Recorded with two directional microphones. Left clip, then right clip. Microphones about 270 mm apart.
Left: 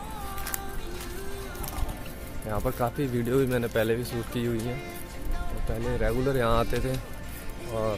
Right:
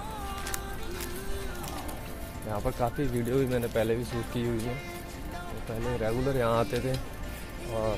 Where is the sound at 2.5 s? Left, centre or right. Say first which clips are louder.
Left 2 dB; centre.